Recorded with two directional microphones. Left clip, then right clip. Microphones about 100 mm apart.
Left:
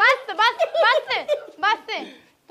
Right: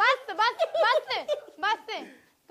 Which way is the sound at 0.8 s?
45° right (ahead or behind).